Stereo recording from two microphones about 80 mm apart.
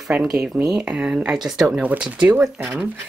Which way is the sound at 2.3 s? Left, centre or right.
Right.